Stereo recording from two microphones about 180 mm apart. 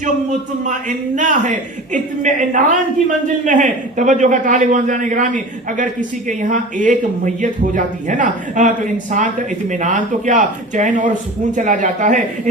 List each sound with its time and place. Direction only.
0.7 s speech: 45° right (ahead or behind)